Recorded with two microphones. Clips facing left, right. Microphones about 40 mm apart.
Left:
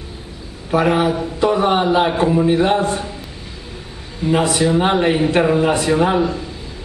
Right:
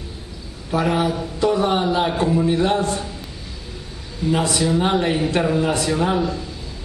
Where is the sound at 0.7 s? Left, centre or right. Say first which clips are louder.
Left 4 dB; left.